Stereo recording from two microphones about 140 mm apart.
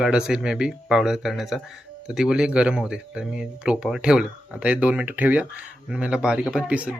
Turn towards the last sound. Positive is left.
turn(degrees=-10)  # may be behind; listen again after turning